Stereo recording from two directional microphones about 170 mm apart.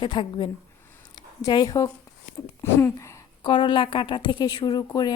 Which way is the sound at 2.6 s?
15° left (ahead or behind).